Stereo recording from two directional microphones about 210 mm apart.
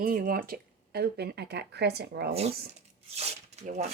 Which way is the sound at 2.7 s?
30° right (ahead or behind).